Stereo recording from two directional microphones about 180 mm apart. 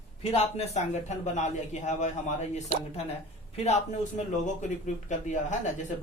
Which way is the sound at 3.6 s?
40° left (ahead or behind).